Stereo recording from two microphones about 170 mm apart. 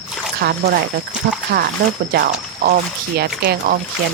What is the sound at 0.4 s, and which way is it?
Speech, 65° right (ahead or behind).